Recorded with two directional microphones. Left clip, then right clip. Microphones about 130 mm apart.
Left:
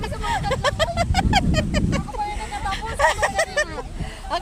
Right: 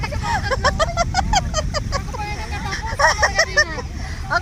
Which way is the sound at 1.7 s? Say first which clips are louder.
Right 1 dB; 35° left (ahead or behind).